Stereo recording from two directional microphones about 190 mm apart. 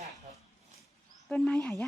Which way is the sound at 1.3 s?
5° left (ahead or behind).